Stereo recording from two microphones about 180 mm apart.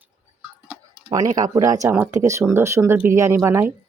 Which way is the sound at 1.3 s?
20° right (ahead or behind).